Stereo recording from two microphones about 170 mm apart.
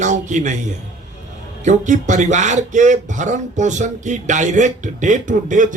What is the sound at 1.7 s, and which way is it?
Speech, 45° right (ahead or behind).